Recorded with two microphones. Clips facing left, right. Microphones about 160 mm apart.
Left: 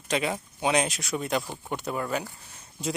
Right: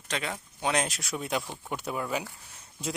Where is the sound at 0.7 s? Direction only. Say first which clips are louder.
Left 4 dB; centre (ahead or behind).